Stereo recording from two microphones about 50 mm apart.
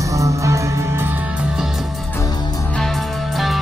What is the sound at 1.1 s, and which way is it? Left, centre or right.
Music, right.